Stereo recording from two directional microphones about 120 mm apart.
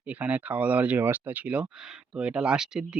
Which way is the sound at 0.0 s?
10° right (ahead or behind).